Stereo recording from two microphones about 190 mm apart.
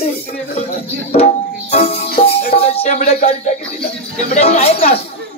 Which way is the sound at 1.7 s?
35° left (ahead or behind).